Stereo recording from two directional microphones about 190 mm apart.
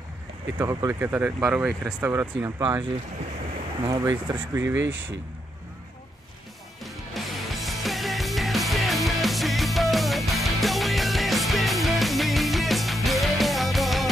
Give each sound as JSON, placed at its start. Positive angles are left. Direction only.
{"t": 0.6, "sound": "speech", "side_deg": -15}
{"t": 3.8, "sound": "speech", "side_deg": -20}
{"t": 6.8, "sound": "music", "side_deg": 0}